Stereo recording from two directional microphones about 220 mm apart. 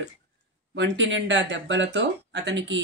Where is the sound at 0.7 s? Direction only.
55° right (ahead or behind).